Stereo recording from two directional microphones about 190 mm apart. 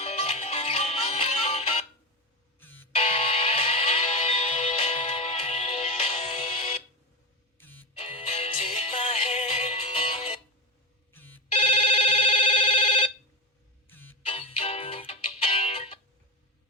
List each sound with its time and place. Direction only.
0.0 s music: 35° left (ahead or behind)
2.6 s music: 10° left (ahead or behind)
2.9 s music: 30° left (ahead or behind)
7.6 s music: 10° left (ahead or behind)
7.9 s music: 30° left (ahead or behind)
11.1 s telephone bell ringing: 10° left (ahead or behind)
11.5 s telephone: 30° left (ahead or behind)
13.8 s music: 10° left (ahead or behind)
14.3 s music: 30° left (ahead or behind)